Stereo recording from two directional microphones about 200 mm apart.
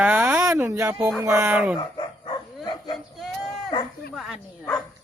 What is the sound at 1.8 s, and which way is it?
Bow-wow, 20° left (ahead or behind).